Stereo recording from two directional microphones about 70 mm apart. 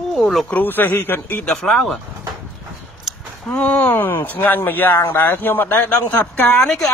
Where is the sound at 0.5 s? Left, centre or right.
Left.